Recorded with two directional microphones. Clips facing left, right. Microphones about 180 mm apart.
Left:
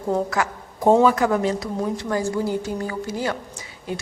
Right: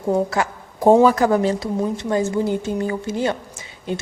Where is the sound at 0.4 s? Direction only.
25° right (ahead or behind).